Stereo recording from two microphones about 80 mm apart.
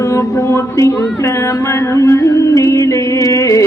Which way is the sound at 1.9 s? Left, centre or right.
Left.